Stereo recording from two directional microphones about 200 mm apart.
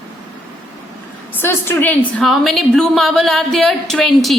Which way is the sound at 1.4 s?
10° left (ahead or behind).